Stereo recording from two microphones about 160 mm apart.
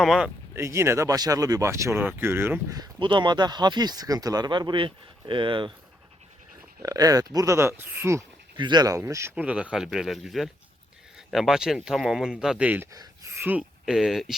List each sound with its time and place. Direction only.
0.0 s speech: centre (ahead or behind)
0.5 s speech: 15° right (ahead or behind)
2.7 s speech: 25° right (ahead or behind)
6.8 s speech: 20° right (ahead or behind)
8.5 s speech: 30° right (ahead or behind); by 14.3 s centre (ahead or behind)